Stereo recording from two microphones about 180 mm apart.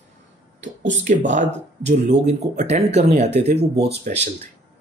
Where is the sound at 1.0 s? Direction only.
45° right (ahead or behind).